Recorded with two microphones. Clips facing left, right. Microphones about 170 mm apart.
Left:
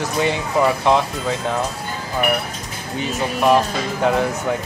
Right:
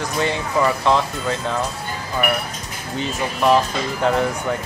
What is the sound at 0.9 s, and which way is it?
Speech, 15° left (ahead or behind).